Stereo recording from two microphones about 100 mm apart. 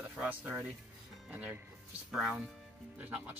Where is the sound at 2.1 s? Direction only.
5° right (ahead or behind).